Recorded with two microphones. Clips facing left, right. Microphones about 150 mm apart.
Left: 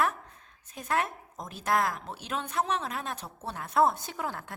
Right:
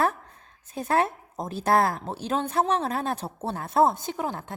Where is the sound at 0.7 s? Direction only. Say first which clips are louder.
Right 6 dB; 30° right (ahead or behind).